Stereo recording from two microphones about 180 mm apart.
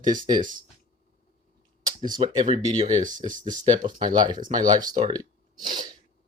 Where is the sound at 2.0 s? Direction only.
25° right (ahead or behind).